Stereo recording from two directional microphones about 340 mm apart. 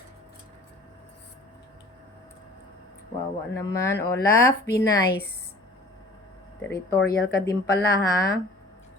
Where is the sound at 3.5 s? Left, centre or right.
Centre.